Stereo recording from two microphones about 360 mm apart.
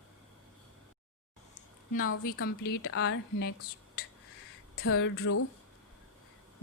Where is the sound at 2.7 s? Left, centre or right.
Left.